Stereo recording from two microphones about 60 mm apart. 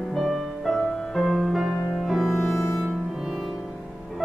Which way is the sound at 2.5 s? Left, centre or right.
Left.